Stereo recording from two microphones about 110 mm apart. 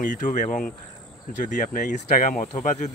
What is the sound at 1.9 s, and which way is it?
Speech, 90° left.